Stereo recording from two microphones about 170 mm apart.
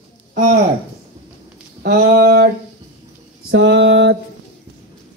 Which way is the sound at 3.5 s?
90° right.